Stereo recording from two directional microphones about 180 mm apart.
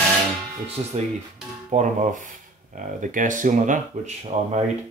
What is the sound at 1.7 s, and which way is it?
Speech, 45° right (ahead or behind).